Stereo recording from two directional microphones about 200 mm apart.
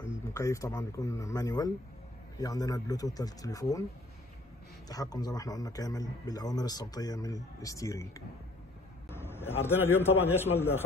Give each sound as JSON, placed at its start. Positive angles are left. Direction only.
{"t": 0.3, "sound": "speech", "side_deg": 15}
{"t": 4.8, "sound": "a man's voice", "side_deg": 20}
{"t": 9.1, "sound": "a sound", "side_deg": 10}
{"t": 9.8, "sound": "speech", "side_deg": 10}